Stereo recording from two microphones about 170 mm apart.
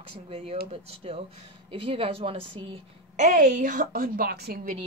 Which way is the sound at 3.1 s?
50° right (ahead or behind).